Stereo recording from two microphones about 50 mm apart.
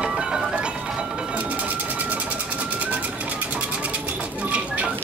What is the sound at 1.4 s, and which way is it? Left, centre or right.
Sewing machine, right.